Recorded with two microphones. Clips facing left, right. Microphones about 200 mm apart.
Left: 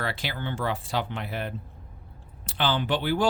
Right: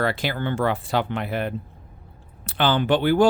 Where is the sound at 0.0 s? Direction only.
50° right (ahead or behind).